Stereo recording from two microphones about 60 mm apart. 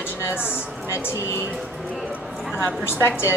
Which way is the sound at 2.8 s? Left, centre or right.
Left.